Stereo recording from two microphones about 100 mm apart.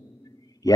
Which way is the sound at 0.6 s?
40° left (ahead or behind).